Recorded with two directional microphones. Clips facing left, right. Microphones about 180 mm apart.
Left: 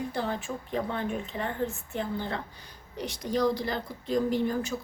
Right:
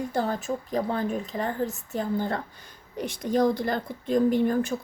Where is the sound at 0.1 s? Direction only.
45° right (ahead or behind).